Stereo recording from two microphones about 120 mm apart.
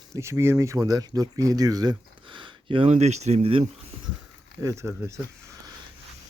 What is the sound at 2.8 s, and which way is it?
Speech, 65° right (ahead or behind).